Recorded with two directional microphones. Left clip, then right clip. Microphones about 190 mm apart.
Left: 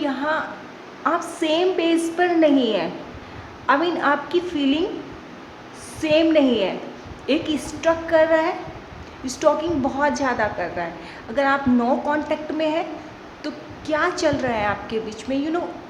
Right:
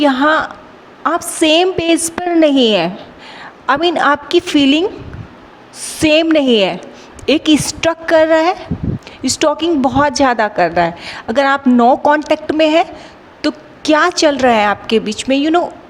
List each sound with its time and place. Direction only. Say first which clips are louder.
0.0 s a woman's voice: right 11 dB; 55° right (ahead or behind)
5.9 s a woman's voice: right 6 dB; 55° right (ahead or behind)